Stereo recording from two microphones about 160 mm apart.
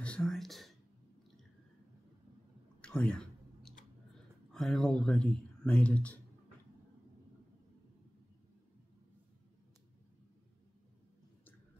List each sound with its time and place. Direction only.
0.0 s whispering: 5° left (ahead or behind)
2.8 s a sound: 5° left (ahead or behind)
4.5 s speech: centre (ahead or behind)